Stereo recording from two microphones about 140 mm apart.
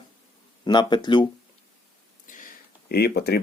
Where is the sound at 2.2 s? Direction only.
75° left (ahead or behind).